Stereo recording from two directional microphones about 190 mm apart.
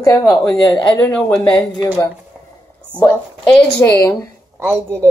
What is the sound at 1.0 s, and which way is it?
Speech, 5° left (ahead or behind).